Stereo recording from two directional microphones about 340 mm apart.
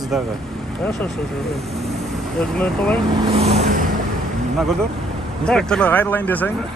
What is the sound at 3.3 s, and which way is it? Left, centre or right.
Vehicle, centre.